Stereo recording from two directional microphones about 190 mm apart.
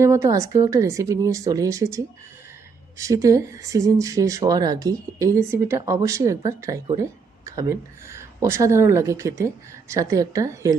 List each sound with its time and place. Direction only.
0.0 s speech: 15° right (ahead or behind)